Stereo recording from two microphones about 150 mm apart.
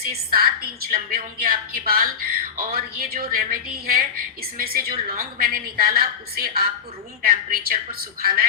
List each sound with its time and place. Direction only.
0.0 s a woman's voice: 80° right